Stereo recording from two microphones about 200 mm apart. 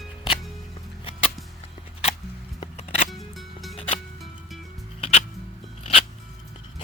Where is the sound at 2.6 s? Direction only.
30° left (ahead or behind).